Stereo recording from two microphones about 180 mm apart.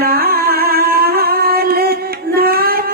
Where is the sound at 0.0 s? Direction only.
60° right (ahead or behind).